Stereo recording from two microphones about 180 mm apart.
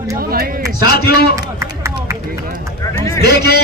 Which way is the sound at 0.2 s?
55° right (ahead or behind).